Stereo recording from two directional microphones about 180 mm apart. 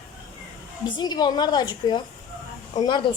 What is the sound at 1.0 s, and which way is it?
A woman's voice, 20° left (ahead or behind).